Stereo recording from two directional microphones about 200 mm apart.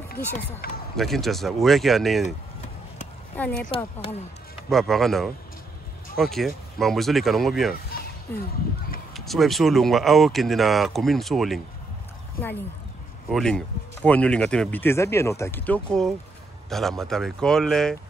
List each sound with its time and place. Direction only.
0.6 s speech: 45° left (ahead or behind)
0.9 s speech: centre (ahead or behind)
2.2 s chop: 35° left (ahead or behind)
3.3 s speech: 5° left (ahead or behind)
3.7 s speech: 30° left (ahead or behind)
4.6 s speech: centre (ahead or behind)
9.1 s speech: centre (ahead or behind)